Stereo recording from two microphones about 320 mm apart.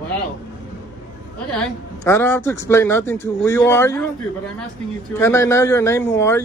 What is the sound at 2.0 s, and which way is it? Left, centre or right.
Speech, centre.